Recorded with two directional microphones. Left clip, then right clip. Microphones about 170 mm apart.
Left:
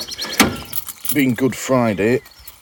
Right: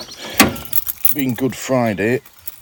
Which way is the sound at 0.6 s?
40° right (ahead or behind).